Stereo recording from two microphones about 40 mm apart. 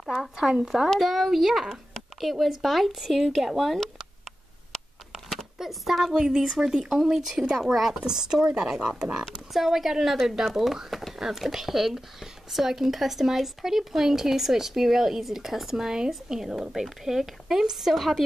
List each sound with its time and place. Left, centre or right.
0.4 s speech: centre
0.9 s speech: centre
5.6 s speech: centre
6.1 s speech: centre
8.0 s speech: centre
9.2 s speech: centre